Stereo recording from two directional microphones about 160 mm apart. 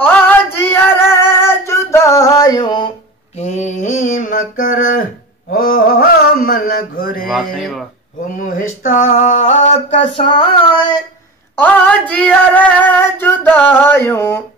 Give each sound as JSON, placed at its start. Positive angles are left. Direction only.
{"t": 0.0, "sound": "female singing", "side_deg": 10}
{"t": 1.2, "sound": "music", "side_deg": 15}
{"t": 1.7, "sound": "a sound", "side_deg": 15}
{"t": 3.3, "sound": "mantra", "side_deg": 45}
{"t": 5.5, "sound": "mantra", "side_deg": 65}
{"t": 7.2, "sound": "speech", "side_deg": 0}
{"t": 8.4, "sound": "a sound", "side_deg": 55}
{"t": 11.5, "sound": "female singing", "side_deg": 10}